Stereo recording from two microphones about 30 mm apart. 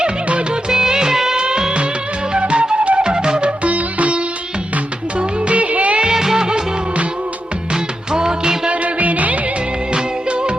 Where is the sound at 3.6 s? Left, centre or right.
Right.